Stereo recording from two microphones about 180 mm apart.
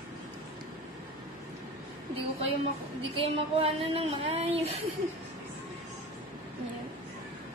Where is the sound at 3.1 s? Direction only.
35° right (ahead or behind).